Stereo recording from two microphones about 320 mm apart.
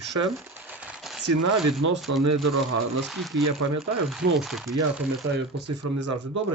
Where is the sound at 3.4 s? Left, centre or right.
Right.